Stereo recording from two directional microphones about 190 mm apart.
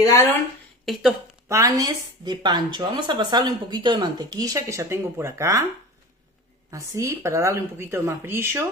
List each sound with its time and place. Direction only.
0.0 s speech: 15° left (ahead or behind)
0.8 s speech: centre (ahead or behind)
1.5 s speech: 15° right (ahead or behind)
6.7 s a woman's voice: 15° right (ahead or behind)